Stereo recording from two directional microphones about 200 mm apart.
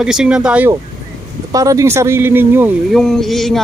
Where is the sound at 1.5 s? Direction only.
15° right (ahead or behind).